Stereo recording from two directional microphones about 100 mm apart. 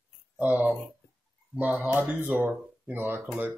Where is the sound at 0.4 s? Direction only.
15° right (ahead or behind).